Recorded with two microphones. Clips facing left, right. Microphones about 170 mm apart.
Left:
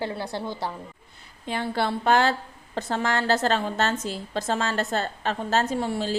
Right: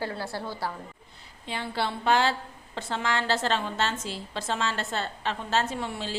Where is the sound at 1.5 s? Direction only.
50° left (ahead or behind).